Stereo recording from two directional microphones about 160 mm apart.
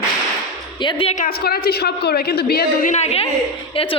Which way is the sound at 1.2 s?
70° left (ahead or behind).